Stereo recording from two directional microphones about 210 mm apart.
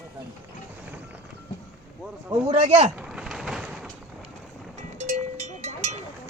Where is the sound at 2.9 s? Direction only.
5° right (ahead or behind).